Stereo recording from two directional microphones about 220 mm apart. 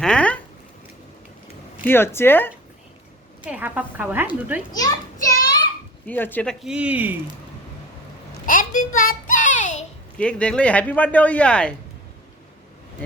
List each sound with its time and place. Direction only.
0.0 s a sound: 5° left (ahead or behind)
1.8 s speech: 10° left (ahead or behind)
3.4 s a woman's voice: 10° right (ahead or behind)
4.7 s a child's voice: 15° left (ahead or behind); by 7.2 s 5° right (ahead or behind)
8.4 s child singing: 40° left (ahead or behind)
10.2 s speech: 5° left (ahead or behind)